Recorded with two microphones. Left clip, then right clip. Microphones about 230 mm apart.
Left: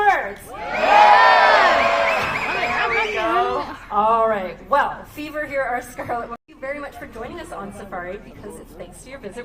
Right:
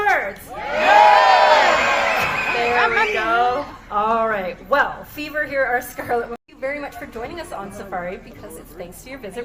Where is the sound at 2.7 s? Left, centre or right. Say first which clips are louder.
Right 4 dB; centre.